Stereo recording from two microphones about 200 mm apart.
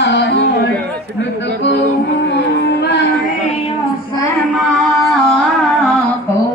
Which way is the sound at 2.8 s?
60° left (ahead or behind).